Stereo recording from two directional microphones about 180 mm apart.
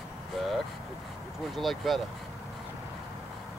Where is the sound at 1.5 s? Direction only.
Centre (ahead or behind).